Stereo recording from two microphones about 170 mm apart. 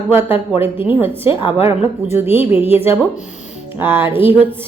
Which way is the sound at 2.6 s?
35° left (ahead or behind).